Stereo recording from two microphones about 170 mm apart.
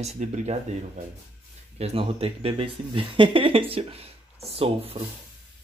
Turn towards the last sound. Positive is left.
turn(degrees=-35)  # may be behind; listen again after turning